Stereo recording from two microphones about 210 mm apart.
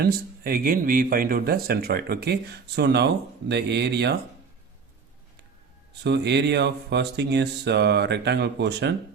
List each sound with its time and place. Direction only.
0.0 s speech: 45° right (ahead or behind)
6.0 s speech: 55° right (ahead or behind)